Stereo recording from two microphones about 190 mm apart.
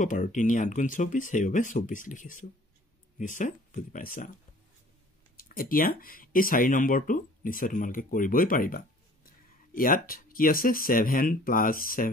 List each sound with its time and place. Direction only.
0.0 s speech: 40° left (ahead or behind)
5.4 s speech: 50° left (ahead or behind)